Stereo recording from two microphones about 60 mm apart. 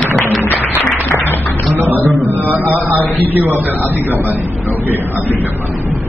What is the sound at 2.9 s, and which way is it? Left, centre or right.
A man's voice, right.